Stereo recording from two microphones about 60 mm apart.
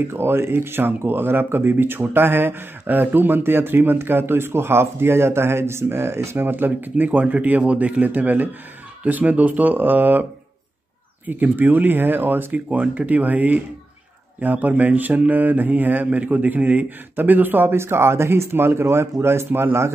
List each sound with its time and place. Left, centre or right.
0.1 s speech: right
11.2 s speech: right
12.5 s speech: centre; by 19.9 s right